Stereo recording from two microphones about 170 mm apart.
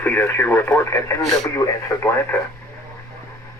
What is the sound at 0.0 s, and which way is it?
Speech, 10° left (ahead or behind).